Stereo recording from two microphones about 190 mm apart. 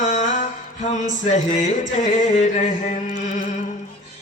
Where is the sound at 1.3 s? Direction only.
40° left (ahead or behind).